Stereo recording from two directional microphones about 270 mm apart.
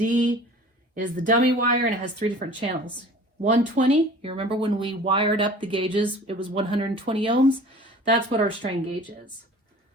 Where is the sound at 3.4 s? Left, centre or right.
Right.